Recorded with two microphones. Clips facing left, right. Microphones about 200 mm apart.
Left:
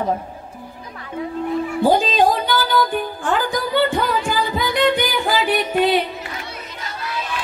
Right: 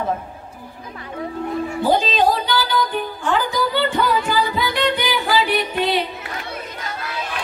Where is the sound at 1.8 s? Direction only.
50° left (ahead or behind).